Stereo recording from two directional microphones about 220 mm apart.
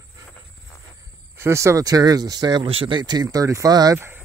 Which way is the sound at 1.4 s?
10° right (ahead or behind).